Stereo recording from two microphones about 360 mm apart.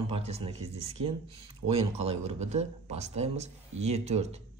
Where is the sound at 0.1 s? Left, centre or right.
Centre.